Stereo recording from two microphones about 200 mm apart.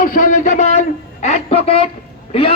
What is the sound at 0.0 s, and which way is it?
A man's voice, 40° left (ahead or behind).